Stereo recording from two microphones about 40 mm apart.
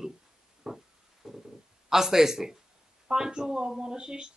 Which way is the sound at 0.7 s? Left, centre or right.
Centre.